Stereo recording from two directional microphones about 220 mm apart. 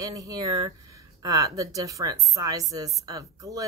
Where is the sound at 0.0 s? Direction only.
15° right (ahead or behind).